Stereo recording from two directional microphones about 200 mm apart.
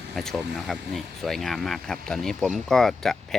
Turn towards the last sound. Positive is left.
turn(degrees=0)  # may be behind; listen again after turning